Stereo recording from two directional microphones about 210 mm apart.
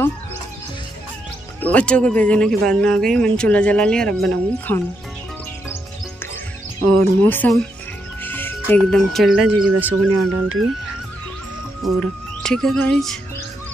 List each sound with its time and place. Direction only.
1.6 s speech: 5° left (ahead or behind)
6.8 s speech: 5° left (ahead or behind)
10.0 s speech: 90° right
12.0 s music: 5° left (ahead or behind)